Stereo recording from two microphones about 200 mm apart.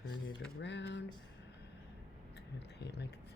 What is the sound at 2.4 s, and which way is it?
Speech, 55° left (ahead or behind).